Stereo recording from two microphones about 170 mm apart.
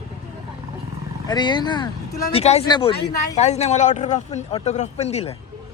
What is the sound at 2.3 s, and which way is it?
Speech, 40° left (ahead or behind).